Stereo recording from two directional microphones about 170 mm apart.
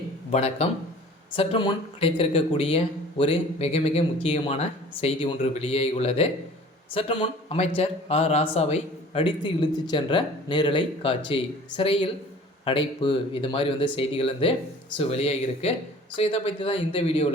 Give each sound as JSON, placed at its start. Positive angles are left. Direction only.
{"t": 0.3, "sound": "speech", "side_deg": 40}